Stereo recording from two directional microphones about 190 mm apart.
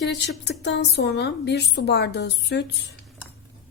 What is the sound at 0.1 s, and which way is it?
A woman's voice, 65° left (ahead or behind).